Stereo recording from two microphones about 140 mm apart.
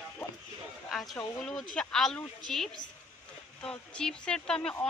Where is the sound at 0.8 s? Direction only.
5° left (ahead or behind).